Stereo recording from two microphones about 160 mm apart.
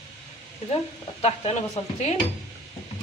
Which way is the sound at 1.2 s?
40° left (ahead or behind).